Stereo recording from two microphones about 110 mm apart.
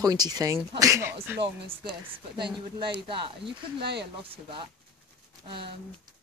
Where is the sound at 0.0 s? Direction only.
35° right (ahead or behind).